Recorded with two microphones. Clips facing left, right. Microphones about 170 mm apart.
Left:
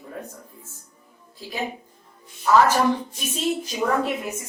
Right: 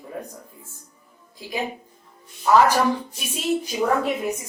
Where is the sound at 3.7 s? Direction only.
5° right (ahead or behind).